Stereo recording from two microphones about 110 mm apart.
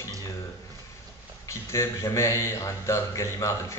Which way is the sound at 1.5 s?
25° left (ahead or behind).